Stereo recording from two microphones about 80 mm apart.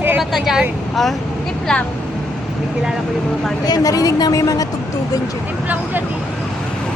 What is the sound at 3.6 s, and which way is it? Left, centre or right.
Speech, left.